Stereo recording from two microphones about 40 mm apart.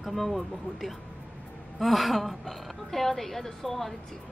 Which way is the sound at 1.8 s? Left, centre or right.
Centre.